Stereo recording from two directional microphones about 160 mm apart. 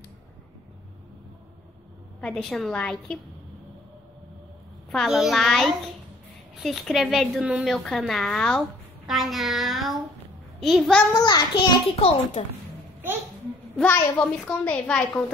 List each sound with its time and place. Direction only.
2.1 s a woman's voice: 5° left (ahead or behind)
4.9 s a woman's voice: centre (ahead or behind)
11.1 s a child's voice: 25° left (ahead or behind)
13.7 s a child's voice: 10° left (ahead or behind)